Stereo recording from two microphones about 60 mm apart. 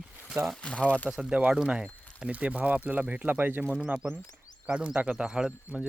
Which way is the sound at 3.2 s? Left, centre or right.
Right.